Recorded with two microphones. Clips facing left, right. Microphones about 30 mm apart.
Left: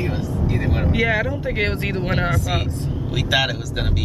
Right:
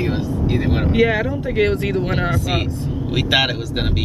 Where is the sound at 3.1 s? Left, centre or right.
Right.